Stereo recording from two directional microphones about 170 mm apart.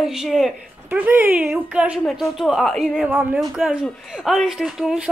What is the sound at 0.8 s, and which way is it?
Speech, 10° right (ahead or behind).